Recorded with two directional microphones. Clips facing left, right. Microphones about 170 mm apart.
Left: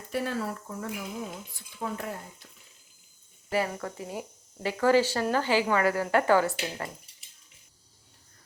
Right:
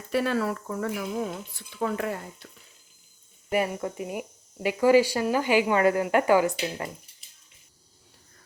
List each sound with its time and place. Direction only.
0.1 s speech: 75° right (ahead or behind)
3.5 s speech: 20° right (ahead or behind)